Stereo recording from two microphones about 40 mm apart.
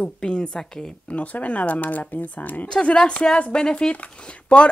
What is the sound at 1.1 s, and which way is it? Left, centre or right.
Speech, left.